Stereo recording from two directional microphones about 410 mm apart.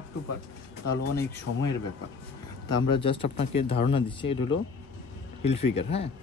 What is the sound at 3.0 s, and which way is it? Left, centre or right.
Speech, centre.